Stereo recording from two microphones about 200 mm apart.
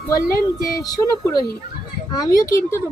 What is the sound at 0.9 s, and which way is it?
Speech, 20° left (ahead or behind).